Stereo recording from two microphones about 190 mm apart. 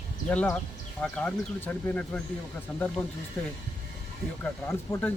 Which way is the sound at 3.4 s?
10° left (ahead or behind).